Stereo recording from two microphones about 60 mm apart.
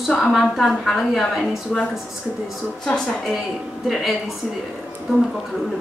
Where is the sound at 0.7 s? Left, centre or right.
Centre.